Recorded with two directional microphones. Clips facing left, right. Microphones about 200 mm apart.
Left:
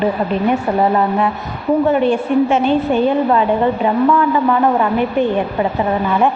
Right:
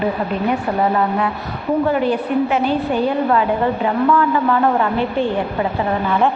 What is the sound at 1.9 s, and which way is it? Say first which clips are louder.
A woman's voice: left 3 dB; 25° left (ahead or behind).